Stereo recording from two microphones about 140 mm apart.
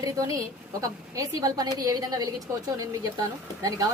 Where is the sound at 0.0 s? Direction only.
25° right (ahead or behind).